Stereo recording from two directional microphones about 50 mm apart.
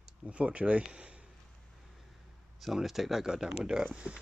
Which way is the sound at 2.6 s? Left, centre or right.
Centre.